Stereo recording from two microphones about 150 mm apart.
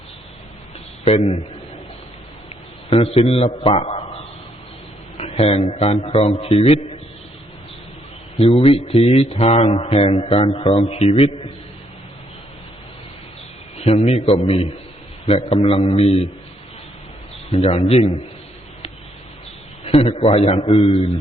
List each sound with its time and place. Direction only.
1.0 s a man's voice: 45° left (ahead or behind)
3.2 s a man's voice: 40° left (ahead or behind)
5.1 s a sound: 40° left (ahead or behind)
5.8 s a man's voice: 40° left (ahead or behind)
8.4 s speech: 40° left (ahead or behind)
13.7 s a man's voice: 45° left (ahead or behind)
17.5 s a man's voice: 45° left (ahead or behind)
19.8 s speech: 45° left (ahead or behind)